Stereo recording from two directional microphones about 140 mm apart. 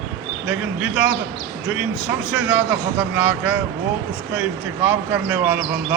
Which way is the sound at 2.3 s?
10° right (ahead or behind).